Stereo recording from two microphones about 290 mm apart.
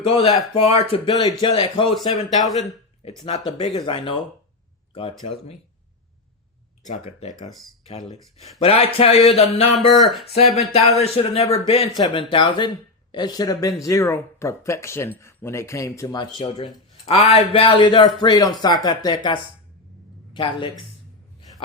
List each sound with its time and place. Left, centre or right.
0.0 s a man's voice: centre
2.5 s speech: centre
3.2 s speech: centre
6.8 s a man's voice: left
9.9 s speech: centre
10.7 s a man's voice: left